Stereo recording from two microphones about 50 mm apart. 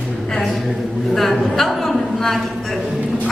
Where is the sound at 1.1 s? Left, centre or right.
Centre.